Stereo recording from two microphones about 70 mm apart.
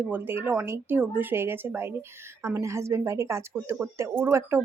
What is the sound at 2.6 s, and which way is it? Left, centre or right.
Speech, right.